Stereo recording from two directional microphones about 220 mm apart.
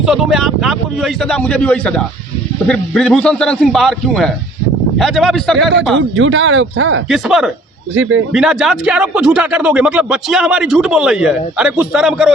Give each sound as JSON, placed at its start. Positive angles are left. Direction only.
{"t": 0.0, "sound": "a man's voice", "side_deg": 0}
{"t": 6.0, "sound": "speech", "side_deg": -60}
{"t": 7.1, "sound": "a man's voice", "side_deg": 0}